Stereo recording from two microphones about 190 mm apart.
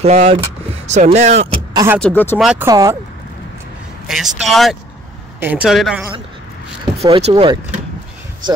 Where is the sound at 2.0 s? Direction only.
10° left (ahead or behind).